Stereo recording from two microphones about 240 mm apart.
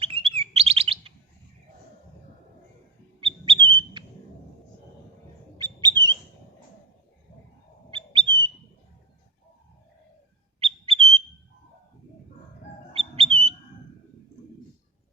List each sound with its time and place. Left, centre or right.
0.0 s chirp: right
0.3 s bird: right
3.2 s bird: right
5.5 s bird: centre
7.9 s bird: right
10.6 s bird: right
12.9 s bird: right